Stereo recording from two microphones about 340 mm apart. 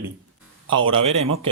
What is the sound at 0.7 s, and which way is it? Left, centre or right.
Speech, centre.